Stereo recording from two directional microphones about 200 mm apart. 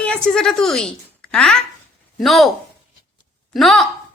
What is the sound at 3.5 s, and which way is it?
Speech, centre (ahead or behind).